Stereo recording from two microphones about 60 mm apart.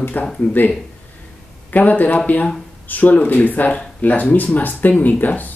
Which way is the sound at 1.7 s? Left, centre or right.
Left.